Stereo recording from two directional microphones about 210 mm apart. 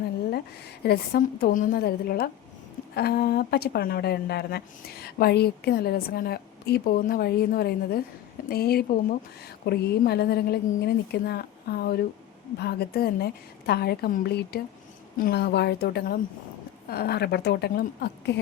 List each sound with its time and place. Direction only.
0.9 s a woman's voice: 45° left (ahead or behind)